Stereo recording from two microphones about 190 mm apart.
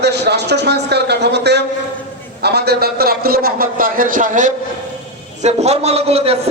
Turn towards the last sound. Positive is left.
turn(degrees=-30)  # may be behind; listen again after turning